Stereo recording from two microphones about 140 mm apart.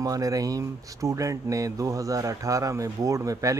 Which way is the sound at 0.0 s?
25° right (ahead or behind).